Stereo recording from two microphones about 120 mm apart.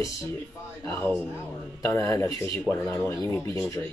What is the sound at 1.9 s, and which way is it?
Speech, 25° left (ahead or behind).